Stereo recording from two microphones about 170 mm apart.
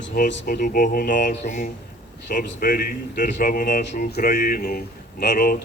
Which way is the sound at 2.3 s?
55° left (ahead or behind).